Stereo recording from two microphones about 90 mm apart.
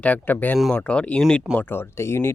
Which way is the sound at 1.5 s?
25° left (ahead or behind).